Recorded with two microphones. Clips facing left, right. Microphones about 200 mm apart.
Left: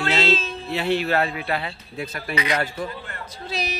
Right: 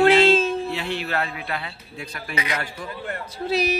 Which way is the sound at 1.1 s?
35° left (ahead or behind).